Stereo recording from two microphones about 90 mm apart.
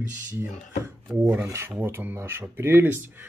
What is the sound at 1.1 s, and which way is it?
Speech, 25° right (ahead or behind).